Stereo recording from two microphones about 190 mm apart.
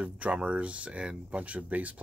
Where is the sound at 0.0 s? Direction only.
5° right (ahead or behind).